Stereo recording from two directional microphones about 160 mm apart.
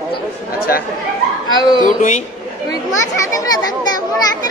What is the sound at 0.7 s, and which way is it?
Speech, 70° left (ahead or behind).